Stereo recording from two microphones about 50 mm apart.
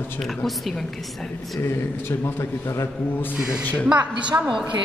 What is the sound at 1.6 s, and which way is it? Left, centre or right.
A man's voice, left.